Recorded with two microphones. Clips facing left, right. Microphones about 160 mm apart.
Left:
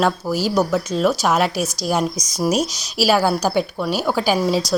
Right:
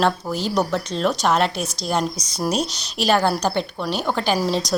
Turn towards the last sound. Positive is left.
turn(degrees=0)  # may be behind; listen again after turning